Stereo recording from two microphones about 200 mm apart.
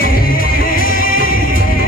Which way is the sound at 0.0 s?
45° left (ahead or behind).